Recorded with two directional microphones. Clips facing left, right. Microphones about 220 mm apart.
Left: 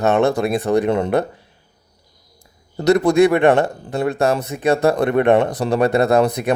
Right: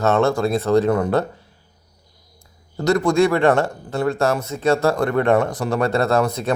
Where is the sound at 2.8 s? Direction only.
20° left (ahead or behind).